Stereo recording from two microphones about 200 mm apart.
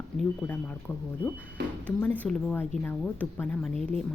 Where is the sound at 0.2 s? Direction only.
5° left (ahead or behind).